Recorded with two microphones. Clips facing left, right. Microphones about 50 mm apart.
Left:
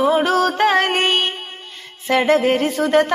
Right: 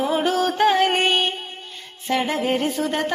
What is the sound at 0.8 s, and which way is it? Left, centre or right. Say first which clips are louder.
Music: left 1 dB; left.